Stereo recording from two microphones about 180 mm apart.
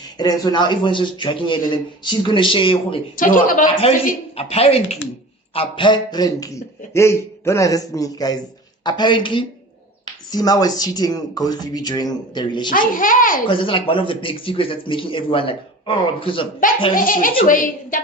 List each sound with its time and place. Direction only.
0.2 s a man's voice: 20° left (ahead or behind)
3.2 s a child's voice: 50° left (ahead or behind)
4.4 s a man's voice: 35° left (ahead or behind)
12.7 s a child's voice: 50° left (ahead or behind)
13.5 s a man's voice: 30° left (ahead or behind)
16.9 s a child's voice: 50° left (ahead or behind)